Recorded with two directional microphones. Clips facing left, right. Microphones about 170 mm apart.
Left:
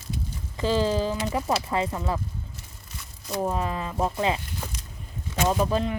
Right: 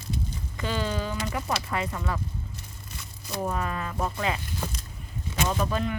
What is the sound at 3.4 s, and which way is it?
Speech, 25° left (ahead or behind).